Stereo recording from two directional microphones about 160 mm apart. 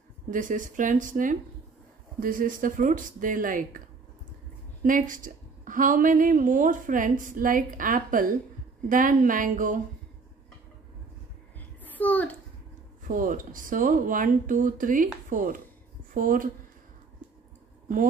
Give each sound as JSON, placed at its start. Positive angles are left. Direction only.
{"t": 0.3, "sound": "a woman's voice", "side_deg": -55}
{"t": 4.8, "sound": "a woman's voice", "side_deg": -55}
{"t": 11.8, "sound": "a sound", "side_deg": 10}
{"t": 13.0, "sound": "a woman's voice", "side_deg": -55}